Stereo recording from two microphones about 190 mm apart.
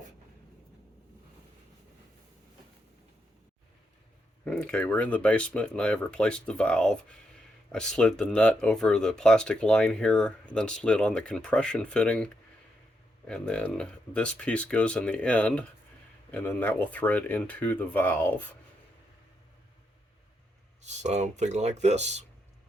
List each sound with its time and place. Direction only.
4.4 s speech: 5° left (ahead or behind)
20.8 s speech: 35° right (ahead or behind)